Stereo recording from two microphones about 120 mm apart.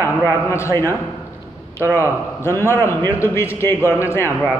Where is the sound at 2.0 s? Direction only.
20° left (ahead or behind).